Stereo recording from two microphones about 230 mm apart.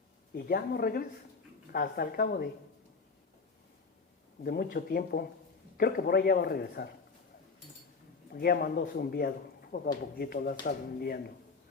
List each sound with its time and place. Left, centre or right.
0.3 s speech: left
4.4 s speech: left
8.3 s speech: left